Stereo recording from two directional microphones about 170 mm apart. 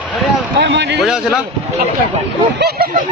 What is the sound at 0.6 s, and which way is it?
Speech, 90° right.